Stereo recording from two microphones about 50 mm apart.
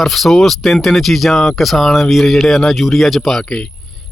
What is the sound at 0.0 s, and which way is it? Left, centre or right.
A man's voice, centre.